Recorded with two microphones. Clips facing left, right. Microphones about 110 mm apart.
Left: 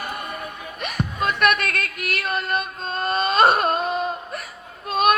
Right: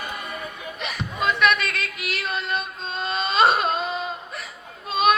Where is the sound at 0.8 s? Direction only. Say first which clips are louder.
Left 3 dB; 50° left (ahead or behind).